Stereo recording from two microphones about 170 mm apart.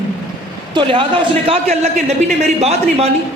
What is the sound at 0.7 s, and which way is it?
A man's voice, 30° right (ahead or behind).